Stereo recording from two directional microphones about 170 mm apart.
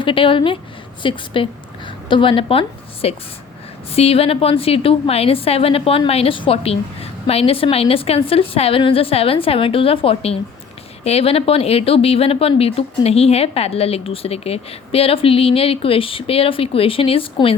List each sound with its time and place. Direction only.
0.0 s a woman's voice: 30° left (ahead or behind)